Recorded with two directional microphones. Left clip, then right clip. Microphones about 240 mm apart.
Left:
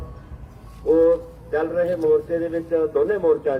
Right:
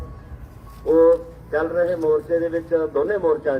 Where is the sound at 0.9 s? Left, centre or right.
Centre.